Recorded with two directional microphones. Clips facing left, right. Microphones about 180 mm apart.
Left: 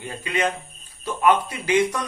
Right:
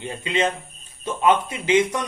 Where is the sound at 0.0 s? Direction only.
20° right (ahead or behind).